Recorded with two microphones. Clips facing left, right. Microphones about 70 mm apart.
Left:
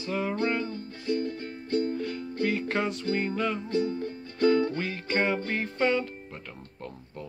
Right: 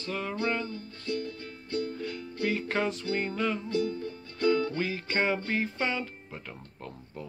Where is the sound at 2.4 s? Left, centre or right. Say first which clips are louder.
Left 1 dB; centre.